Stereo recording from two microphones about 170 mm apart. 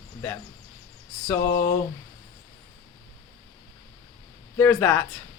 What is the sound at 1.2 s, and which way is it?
Speech, 15° left (ahead or behind).